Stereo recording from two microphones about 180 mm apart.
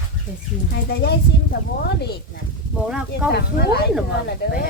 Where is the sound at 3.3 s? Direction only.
60° left (ahead or behind).